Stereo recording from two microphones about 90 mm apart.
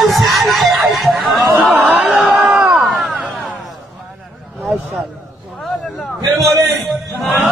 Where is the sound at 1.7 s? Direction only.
20° right (ahead or behind).